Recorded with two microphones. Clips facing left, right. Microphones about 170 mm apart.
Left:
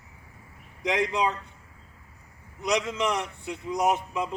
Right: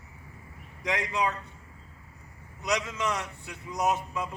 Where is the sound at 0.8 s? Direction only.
20° left (ahead or behind).